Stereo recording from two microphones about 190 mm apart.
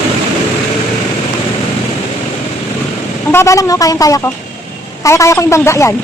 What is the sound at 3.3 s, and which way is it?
Speech, 15° left (ahead or behind).